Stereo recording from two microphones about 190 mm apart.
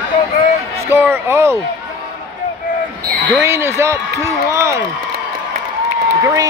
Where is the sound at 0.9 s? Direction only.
10° right (ahead or behind).